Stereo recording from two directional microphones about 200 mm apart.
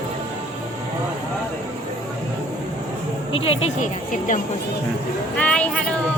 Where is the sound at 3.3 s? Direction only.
30° left (ahead or behind).